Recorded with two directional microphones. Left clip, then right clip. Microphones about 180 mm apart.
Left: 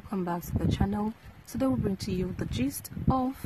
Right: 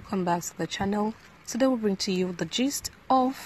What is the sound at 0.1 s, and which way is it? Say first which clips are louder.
A woman's voice: right 6 dB; 10° right (ahead or behind).